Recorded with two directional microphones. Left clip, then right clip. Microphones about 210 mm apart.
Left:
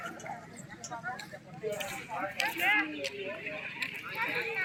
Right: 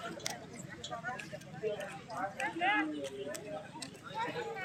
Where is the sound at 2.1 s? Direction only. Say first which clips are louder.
Left 4 dB; 50° right (ahead or behind).